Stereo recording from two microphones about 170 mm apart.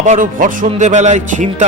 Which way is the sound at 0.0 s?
50° right (ahead or behind).